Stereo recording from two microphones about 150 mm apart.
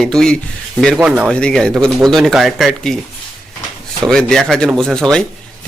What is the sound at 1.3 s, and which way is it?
Speech, 5° left (ahead or behind).